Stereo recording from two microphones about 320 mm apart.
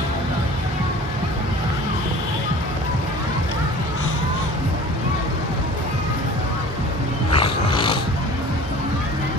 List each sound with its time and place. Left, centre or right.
7.3 s music: centre